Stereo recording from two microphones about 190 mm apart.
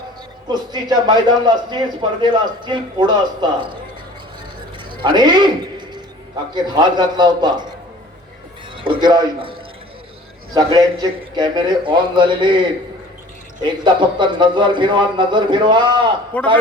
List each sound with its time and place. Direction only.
0.4 s a man's voice: 20° right (ahead or behind)
4.9 s a sound: 25° right (ahead or behind)
6.5 s a man's voice: 25° right (ahead or behind)
8.7 s a man's voice: 25° right (ahead or behind)
16.3 s a man's voice: 5° left (ahead or behind)